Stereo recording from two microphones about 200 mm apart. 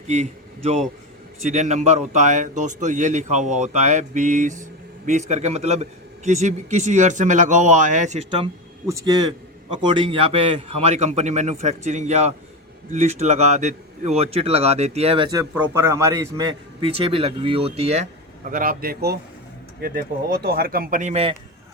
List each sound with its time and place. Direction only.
0.1 s a man's voice: 35° right (ahead or behind)
8.9 s a man's voice: 15° right (ahead or behind)
15.5 s a man's voice: 15° right (ahead or behind); by 21.3 s 30° right (ahead or behind)